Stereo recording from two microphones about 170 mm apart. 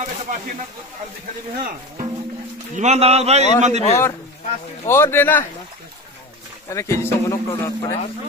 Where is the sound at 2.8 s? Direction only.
40° right (ahead or behind).